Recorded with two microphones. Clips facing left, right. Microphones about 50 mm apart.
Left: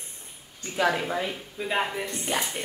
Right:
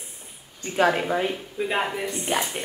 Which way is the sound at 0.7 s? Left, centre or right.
Right.